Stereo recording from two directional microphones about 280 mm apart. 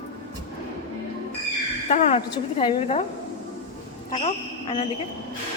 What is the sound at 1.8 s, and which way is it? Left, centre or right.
A woman's voice, left.